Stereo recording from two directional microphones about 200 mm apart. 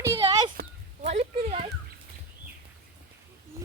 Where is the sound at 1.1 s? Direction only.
30° right (ahead or behind).